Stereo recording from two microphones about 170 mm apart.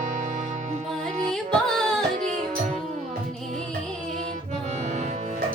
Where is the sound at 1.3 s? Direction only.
5° left (ahead or behind).